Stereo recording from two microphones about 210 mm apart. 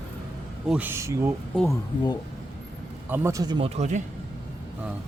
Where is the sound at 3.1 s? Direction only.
10° right (ahead or behind).